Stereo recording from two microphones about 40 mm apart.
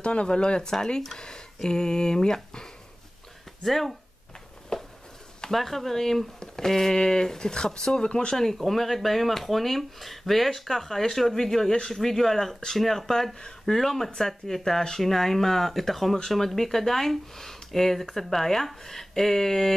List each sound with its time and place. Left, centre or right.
0.0 s speech: left
3.6 s speech: centre
4.7 s a sound: centre
5.5 s speech: centre; by 8.4 s left
8.4 s speech: centre